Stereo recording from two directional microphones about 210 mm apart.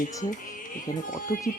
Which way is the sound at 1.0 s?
40° left (ahead or behind).